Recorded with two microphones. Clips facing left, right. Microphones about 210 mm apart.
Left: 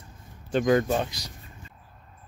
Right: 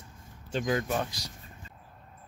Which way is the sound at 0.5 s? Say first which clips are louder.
Left 8 dB; 60° left (ahead or behind).